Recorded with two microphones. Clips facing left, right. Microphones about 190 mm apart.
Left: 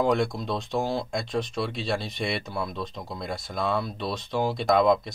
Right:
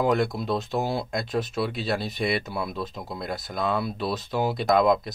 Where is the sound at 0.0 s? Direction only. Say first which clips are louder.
Right 1 dB; 5° right (ahead or behind).